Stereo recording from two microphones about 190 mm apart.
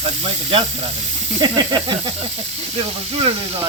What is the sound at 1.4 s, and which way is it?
Stir, 25° right (ahead or behind).